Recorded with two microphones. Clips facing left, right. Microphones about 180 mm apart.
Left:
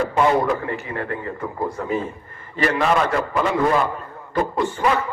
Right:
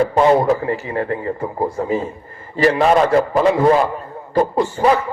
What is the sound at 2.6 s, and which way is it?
A man's voice, 30° right (ahead or behind).